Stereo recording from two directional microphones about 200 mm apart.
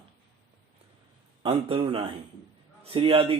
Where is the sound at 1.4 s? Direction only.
25° right (ahead or behind).